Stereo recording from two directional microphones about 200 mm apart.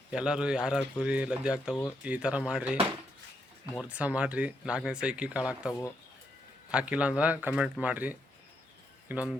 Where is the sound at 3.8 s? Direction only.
5° right (ahead or behind).